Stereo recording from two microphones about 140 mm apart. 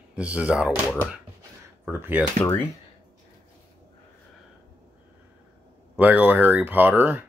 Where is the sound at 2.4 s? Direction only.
15° left (ahead or behind).